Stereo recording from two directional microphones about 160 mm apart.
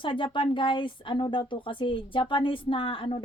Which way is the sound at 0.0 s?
30° left (ahead or behind).